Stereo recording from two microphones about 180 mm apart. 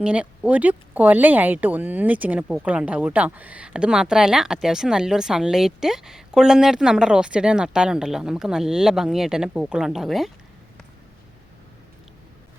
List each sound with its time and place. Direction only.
0.0 s speech: 5° right (ahead or behind)